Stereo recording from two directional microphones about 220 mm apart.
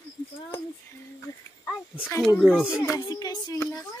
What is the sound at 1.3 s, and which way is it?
Speech, 15° left (ahead or behind).